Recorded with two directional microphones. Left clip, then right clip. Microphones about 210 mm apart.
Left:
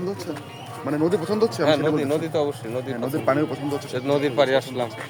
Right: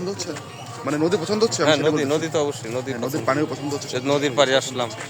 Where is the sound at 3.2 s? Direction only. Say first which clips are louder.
Left 1 dB; 40° left (ahead or behind).